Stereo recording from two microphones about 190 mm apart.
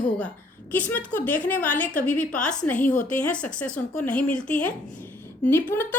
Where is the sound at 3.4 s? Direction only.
5° left (ahead or behind).